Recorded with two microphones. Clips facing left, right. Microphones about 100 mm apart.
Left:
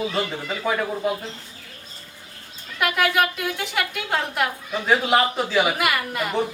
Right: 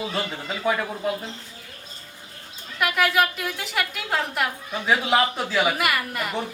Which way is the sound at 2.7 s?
Centre (ahead or behind).